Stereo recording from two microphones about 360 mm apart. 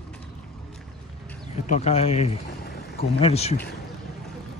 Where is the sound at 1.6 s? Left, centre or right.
Centre.